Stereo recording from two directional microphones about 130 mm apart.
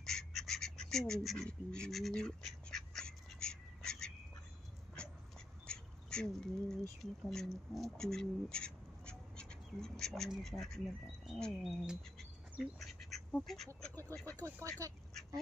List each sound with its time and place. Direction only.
0.0 s duck: 5° left (ahead or behind)
5.7 s duck: 5° left (ahead or behind)
7.0 s speech: centre (ahead or behind)
11.3 s frog: 5° left (ahead or behind)
11.8 s duck: 5° right (ahead or behind)
13.4 s frog: centre (ahead or behind)
14.2 s speech: 15° left (ahead or behind)
14.8 s speech: 25° right (ahead or behind)